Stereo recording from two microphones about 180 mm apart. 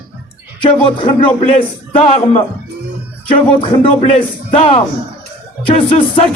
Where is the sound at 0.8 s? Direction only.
25° left (ahead or behind).